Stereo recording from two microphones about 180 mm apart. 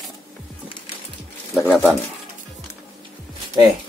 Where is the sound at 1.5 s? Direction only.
10° left (ahead or behind).